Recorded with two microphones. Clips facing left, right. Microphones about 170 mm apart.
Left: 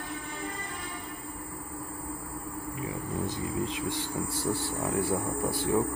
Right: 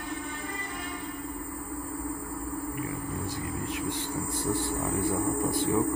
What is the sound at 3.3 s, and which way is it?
Speech, 20° left (ahead or behind).